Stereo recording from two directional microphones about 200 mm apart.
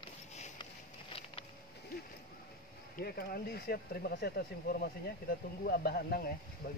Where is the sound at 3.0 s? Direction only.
50° left (ahead or behind).